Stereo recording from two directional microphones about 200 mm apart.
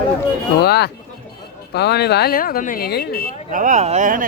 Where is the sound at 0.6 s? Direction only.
55° left (ahead or behind).